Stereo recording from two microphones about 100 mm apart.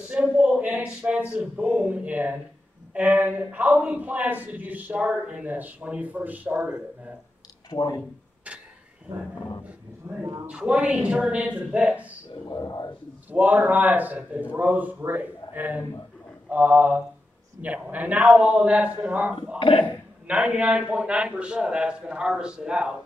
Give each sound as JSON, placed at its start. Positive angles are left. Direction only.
{"t": 0.1, "sound": "a man's voice", "side_deg": -10}
{"t": 7.7, "sound": "speech", "side_deg": 45}
{"t": 8.5, "sound": "a sound", "side_deg": -10}
{"t": 10.0, "sound": "speech", "side_deg": -20}
{"t": 10.6, "sound": "a man's voice", "side_deg": -10}
{"t": 12.4, "sound": "speech", "side_deg": 40}
{"t": 13.3, "sound": "a man's voice", "side_deg": -15}